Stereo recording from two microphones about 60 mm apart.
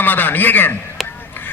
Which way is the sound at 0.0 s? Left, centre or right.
Left.